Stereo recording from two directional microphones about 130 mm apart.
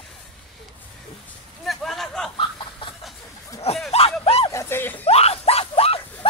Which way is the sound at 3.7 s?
55° left (ahead or behind).